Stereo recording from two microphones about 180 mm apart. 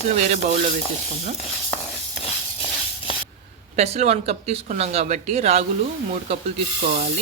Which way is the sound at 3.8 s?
40° right (ahead or behind).